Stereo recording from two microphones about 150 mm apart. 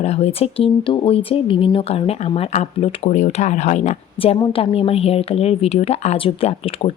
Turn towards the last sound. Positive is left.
turn(degrees=40)  # may be behind; listen again after turning